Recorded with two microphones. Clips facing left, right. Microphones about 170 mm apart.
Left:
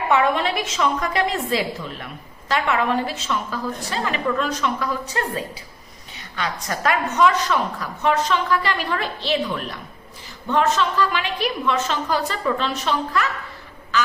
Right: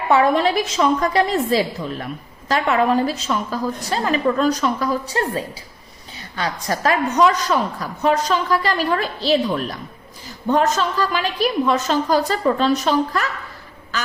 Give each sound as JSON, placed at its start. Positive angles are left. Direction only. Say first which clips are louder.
{"t": 0.1, "sound": "a woman's voice", "louder": "right 4 dB", "side_deg": -35}